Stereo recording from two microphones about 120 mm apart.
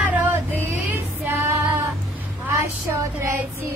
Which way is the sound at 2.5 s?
20° right (ahead or behind).